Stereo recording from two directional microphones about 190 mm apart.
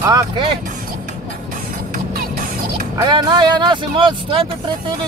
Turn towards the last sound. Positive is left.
turn(degrees=-25)  # may be behind; listen again after turning